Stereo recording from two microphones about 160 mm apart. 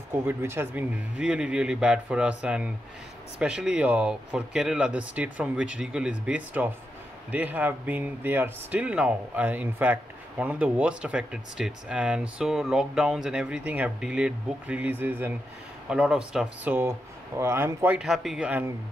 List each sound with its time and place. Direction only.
0.1 s speech: 15° right (ahead or behind)
17.9 s speech: centre (ahead or behind)